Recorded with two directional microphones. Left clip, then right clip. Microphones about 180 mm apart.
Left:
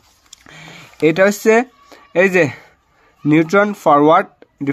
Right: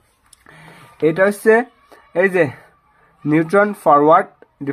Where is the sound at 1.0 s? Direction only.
25° left (ahead or behind).